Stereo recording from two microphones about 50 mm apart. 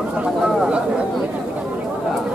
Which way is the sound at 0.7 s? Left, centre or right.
Right.